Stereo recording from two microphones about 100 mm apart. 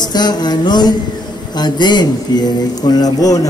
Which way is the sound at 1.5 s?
45° left (ahead or behind).